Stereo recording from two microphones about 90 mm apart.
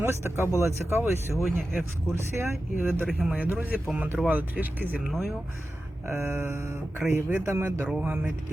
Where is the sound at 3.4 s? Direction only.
15° right (ahead or behind).